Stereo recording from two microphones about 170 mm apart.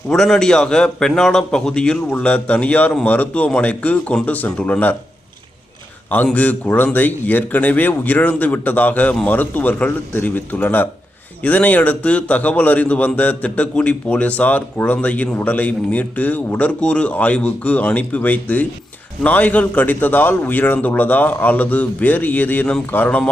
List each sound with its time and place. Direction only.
0.1 s a man's voice: 5° left (ahead or behind)
6.1 s a man's voice: 10° left (ahead or behind)